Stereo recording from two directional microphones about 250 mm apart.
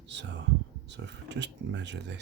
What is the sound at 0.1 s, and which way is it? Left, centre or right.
Speech, right.